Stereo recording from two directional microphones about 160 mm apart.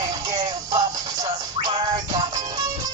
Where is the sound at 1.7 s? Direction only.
25° right (ahead or behind).